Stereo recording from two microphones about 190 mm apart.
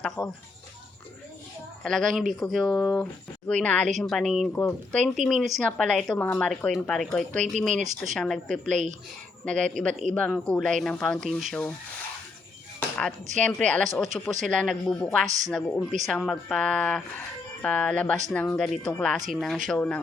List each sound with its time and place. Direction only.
0.2 s speech: 20° left (ahead or behind)
1.8 s speech: centre (ahead or behind)
7.7 s speech: 40° right (ahead or behind)
8.1 s speech: 5° left (ahead or behind)
13.4 s speech: 5° left (ahead or behind)